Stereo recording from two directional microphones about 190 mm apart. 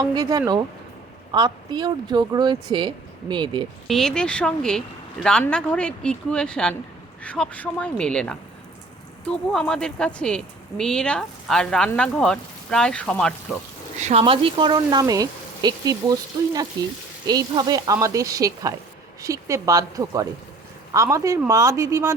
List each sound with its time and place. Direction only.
0.0 s speech: 20° right (ahead or behind)
3.8 s speech: centre (ahead or behind)
14.0 s speech: 30° right (ahead or behind); by 22.1 s 15° right (ahead or behind)